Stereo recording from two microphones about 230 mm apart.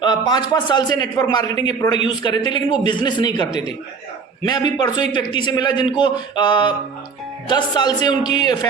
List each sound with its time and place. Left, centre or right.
0.0 s a man's voice: centre